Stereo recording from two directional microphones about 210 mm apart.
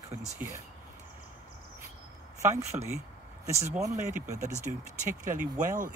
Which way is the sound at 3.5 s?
30° right (ahead or behind).